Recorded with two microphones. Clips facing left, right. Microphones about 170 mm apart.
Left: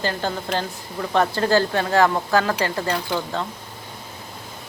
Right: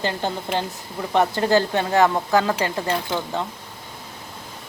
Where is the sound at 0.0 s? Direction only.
20° right (ahead or behind).